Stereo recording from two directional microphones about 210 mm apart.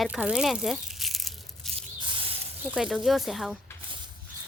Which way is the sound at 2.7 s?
Centre (ahead or behind).